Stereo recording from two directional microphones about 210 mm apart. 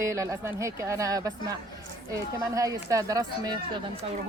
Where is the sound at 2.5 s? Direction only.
15° right (ahead or behind).